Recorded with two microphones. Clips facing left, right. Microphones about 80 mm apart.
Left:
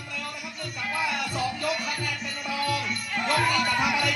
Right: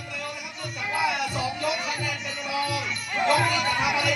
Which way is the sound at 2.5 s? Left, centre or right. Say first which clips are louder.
Even; centre.